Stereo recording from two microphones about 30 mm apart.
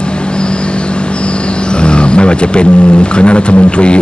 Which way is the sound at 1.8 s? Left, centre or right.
Left.